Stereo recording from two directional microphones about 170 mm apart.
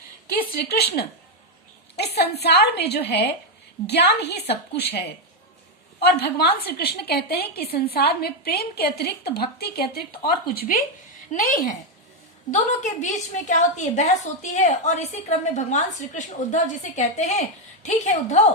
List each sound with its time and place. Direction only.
0.5 s a woman's voice: 70° left (ahead or behind); by 18.4 s 45° left (ahead or behind)